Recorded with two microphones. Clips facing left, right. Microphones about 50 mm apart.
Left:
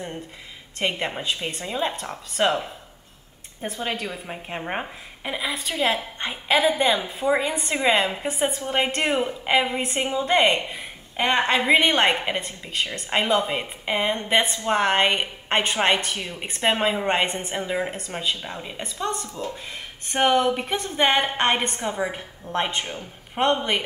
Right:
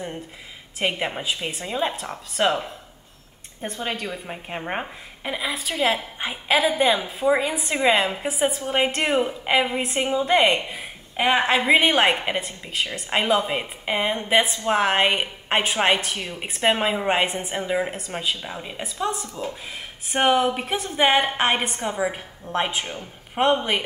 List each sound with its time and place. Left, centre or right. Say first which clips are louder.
0.7 s a woman's voice: right 1 dB; centre